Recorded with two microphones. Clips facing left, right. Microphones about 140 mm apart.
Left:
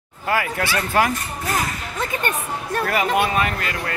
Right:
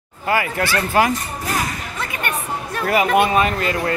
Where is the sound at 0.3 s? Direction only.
Centre (ahead or behind).